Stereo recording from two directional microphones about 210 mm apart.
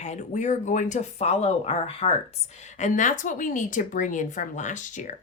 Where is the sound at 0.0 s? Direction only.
35° left (ahead or behind).